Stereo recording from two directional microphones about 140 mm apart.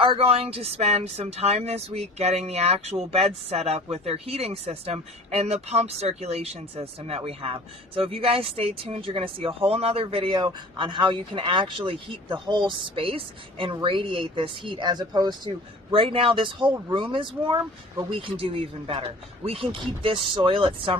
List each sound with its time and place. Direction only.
0.0 s speech: 40° right (ahead or behind)